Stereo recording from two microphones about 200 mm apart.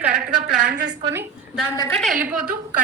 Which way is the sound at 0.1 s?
55° right (ahead or behind).